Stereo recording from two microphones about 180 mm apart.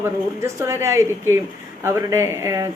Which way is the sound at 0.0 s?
15° right (ahead or behind).